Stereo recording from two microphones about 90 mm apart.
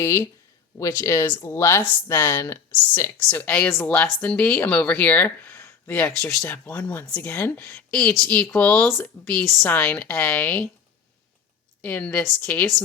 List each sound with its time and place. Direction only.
0.0 s speech: 30° left (ahead or behind)
3.2 s speech: 15° left (ahead or behind)
7.9 s a woman's voice: 10° left (ahead or behind)
11.8 s speech: 20° left (ahead or behind)